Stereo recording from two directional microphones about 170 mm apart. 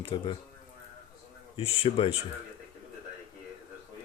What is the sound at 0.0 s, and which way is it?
Speech, 30° left (ahead or behind).